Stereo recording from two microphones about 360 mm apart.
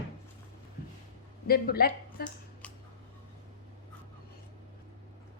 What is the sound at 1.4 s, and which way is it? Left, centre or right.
Speech, left.